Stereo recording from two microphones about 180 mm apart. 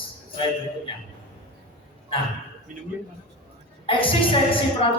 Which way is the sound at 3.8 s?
30° left (ahead or behind).